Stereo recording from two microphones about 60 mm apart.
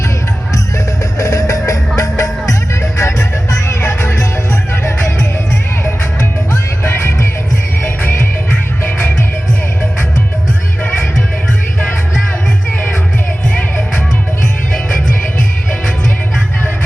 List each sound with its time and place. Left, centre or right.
1.2 s music: left
4.7 s music: left
6.8 s music: left